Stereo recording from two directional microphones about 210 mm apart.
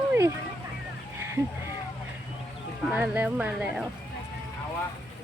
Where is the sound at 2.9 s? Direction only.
10° right (ahead or behind).